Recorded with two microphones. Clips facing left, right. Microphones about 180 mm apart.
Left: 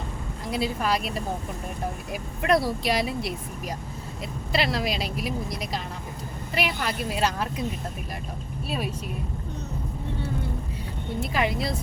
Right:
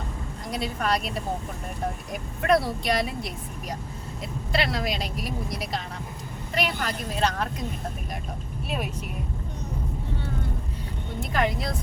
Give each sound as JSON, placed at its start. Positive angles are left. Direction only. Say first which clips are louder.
{"t": 0.5, "sound": "speech", "louder": "left 1 dB", "side_deg": 5}
{"t": 2.5, "sound": "speech", "louder": "even", "side_deg": 0}
{"t": 4.5, "sound": "a woman's voice", "louder": "left 1 dB", "side_deg": 0}
{"t": 11.2, "sound": "speech", "louder": "even", "side_deg": 5}